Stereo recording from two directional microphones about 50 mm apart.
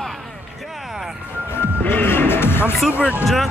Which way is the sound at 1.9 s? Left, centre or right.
Left.